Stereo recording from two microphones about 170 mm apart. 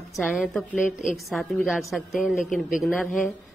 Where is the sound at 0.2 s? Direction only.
Centre (ahead or behind).